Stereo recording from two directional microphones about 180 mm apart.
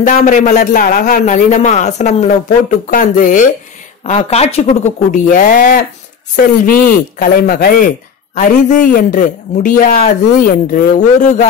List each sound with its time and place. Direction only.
0.0 s a man's voice: 45° left (ahead or behind)
5.1 s a man's voice: 50° left (ahead or behind)